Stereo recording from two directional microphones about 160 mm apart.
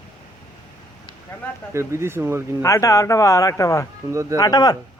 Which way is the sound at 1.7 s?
15° right (ahead or behind).